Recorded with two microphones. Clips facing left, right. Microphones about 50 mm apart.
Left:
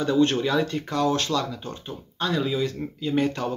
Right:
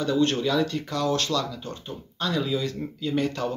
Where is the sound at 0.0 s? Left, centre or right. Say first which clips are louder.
Left 2 dB; centre.